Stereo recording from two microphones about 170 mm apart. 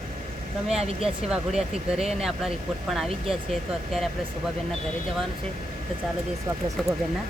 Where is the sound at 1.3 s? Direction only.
5° right (ahead or behind).